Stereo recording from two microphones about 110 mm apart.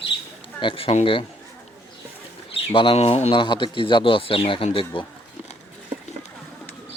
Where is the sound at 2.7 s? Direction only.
60° left (ahead or behind).